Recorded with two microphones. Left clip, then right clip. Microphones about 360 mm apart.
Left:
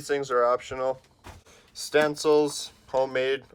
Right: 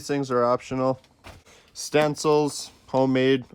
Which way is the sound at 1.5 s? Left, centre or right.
Right.